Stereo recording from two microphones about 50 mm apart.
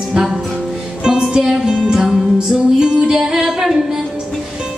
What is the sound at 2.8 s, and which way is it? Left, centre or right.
Music, centre.